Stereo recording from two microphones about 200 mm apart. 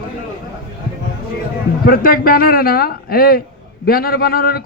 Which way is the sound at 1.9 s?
45° left (ahead or behind).